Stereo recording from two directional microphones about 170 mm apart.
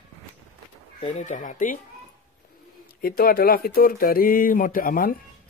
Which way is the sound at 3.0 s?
60° left (ahead or behind).